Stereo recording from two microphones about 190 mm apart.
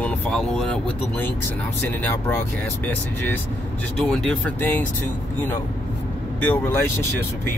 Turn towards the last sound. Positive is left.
turn(degrees=10)  # may be behind; listen again after turning